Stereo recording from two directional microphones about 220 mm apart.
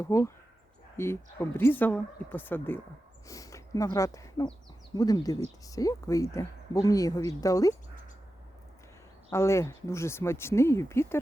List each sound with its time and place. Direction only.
0.0 s speech: 15° left (ahead or behind)
9.3 s speech: 15° left (ahead or behind)